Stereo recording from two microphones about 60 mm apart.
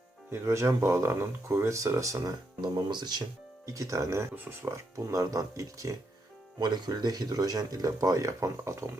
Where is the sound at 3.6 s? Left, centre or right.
Right.